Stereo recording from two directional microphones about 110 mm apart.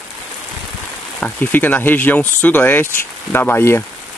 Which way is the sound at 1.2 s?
15° left (ahead or behind).